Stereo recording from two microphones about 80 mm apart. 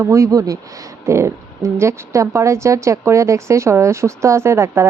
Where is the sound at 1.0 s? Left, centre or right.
Right.